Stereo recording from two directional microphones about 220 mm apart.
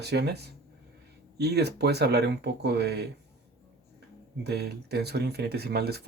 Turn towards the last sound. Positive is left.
turn(degrees=-45)  # may be behind; listen again after turning